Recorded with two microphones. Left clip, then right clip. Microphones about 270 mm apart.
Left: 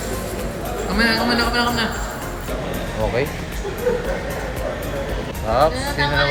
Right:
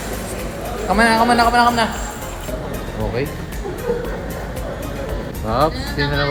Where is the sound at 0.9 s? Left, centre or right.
Centre.